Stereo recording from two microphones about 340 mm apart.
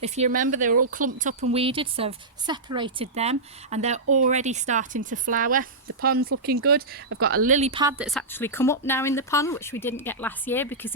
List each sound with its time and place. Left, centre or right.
0.0 s speech: right; by 10.9 s centre